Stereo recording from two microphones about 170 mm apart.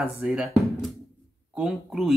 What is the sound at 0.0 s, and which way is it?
Speech, 5° right (ahead or behind).